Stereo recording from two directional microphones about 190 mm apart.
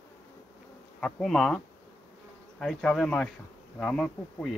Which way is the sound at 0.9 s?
5° left (ahead or behind).